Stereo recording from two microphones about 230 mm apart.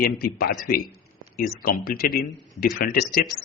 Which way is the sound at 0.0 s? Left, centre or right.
Left.